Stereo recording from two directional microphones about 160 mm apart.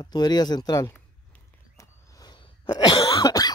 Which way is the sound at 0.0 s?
25° left (ahead or behind).